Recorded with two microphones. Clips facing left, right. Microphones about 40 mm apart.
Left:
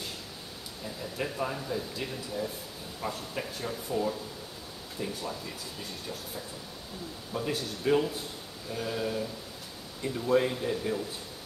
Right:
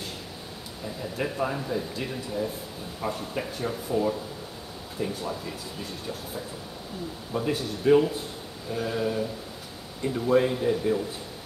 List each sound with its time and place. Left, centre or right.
1.1 s speech: centre
7.3 s speech: centre